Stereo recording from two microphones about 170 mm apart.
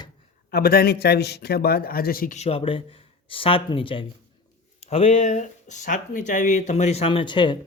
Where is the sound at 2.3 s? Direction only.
35° left (ahead or behind).